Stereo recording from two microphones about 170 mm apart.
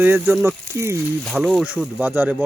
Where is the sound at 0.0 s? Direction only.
10° right (ahead or behind).